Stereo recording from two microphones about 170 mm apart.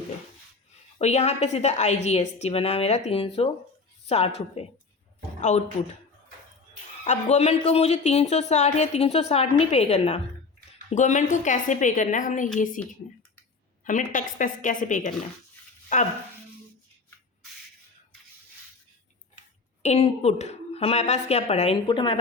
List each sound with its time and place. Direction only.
0.9 s a woman's voice: 40° left (ahead or behind)
5.4 s speech: 45° left (ahead or behind)
7.0 s a woman's voice: 40° left (ahead or behind)
13.8 s a woman's voice: 50° left (ahead or behind)
19.8 s speech: 40° left (ahead or behind)